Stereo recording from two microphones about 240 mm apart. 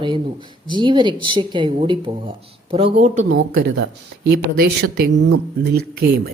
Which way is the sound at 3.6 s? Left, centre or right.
Right.